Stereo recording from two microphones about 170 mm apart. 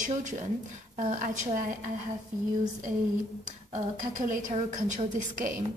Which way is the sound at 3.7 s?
50° right (ahead or behind).